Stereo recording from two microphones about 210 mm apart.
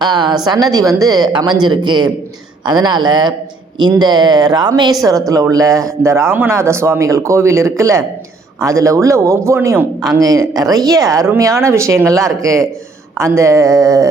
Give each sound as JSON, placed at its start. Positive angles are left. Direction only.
{"t": 0.0, "sound": "a sound", "side_deg": -20}
{"t": 0.4, "sound": "speech", "side_deg": -15}
{"t": 10.2, "sound": "speech", "side_deg": -15}